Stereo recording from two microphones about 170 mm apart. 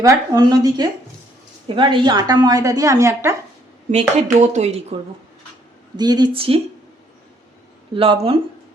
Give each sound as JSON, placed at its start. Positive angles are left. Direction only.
{"t": 0.0, "sound": "a woman's voice", "side_deg": -20}
{"t": 3.9, "sound": "speech", "side_deg": -40}
{"t": 6.0, "sound": "a woman's voice", "side_deg": -25}
{"t": 7.9, "sound": "speech", "side_deg": -35}